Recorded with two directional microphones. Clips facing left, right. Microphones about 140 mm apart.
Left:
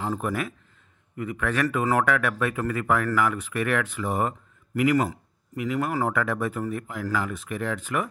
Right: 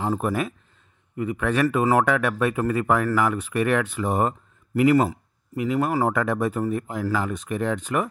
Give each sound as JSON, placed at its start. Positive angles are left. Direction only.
{"t": 0.0, "sound": "speech", "side_deg": -25}